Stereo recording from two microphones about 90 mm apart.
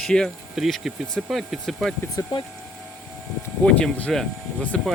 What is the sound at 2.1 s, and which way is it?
Speech, 55° left (ahead or behind).